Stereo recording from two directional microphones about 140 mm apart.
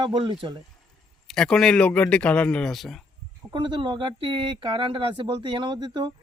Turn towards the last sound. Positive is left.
turn(degrees=-30)  # may be behind; listen again after turning